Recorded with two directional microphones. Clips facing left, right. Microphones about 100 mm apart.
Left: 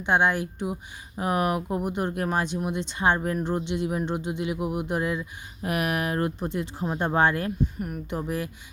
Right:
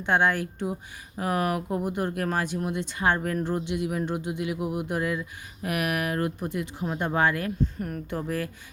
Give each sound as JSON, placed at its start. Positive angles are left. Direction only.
{"t": 0.0, "sound": "speech", "side_deg": 20}
{"t": 7.6, "sound": "speech", "side_deg": 10}